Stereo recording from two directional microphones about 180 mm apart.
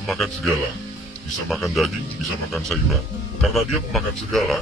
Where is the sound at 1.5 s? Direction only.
Centre (ahead or behind).